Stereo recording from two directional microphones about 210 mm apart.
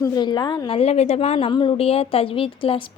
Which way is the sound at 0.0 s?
20° left (ahead or behind).